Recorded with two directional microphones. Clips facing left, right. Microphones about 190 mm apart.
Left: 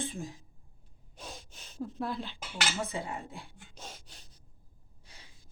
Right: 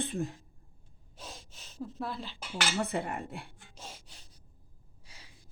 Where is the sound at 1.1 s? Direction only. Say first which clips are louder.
Left 2 dB; centre (ahead or behind).